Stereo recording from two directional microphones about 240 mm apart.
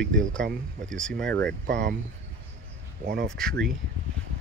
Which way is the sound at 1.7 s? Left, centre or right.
Right.